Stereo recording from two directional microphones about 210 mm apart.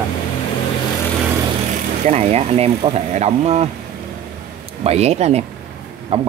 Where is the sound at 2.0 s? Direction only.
30° right (ahead or behind).